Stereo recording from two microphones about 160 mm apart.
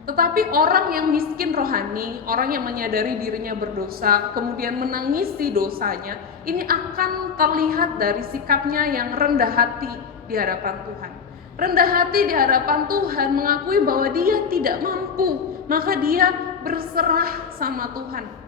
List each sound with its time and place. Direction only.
0.1 s a woman's voice: 65° right (ahead or behind)